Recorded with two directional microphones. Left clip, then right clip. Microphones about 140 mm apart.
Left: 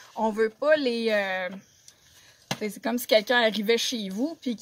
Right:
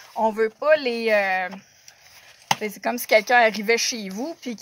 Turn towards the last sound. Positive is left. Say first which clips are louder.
# even
turn(degrees=-10)  # may be behind; listen again after turning